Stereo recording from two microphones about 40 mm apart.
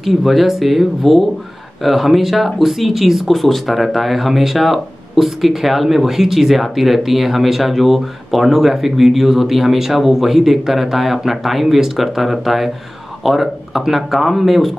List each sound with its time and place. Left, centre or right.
0.0 s speech: centre